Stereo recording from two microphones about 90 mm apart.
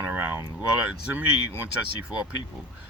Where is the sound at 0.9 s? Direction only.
20° right (ahead or behind).